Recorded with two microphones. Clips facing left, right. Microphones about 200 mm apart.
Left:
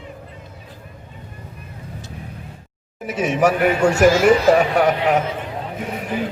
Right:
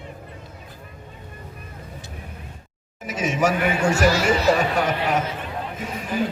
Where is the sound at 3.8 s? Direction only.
45° left (ahead or behind); by 5.2 s 65° left (ahead or behind).